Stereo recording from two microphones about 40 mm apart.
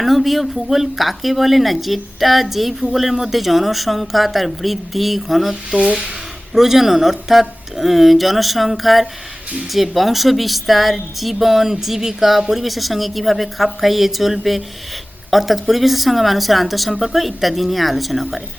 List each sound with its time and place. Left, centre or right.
0.0 s speech: centre
5.7 s speech: right
6.5 s speech: centre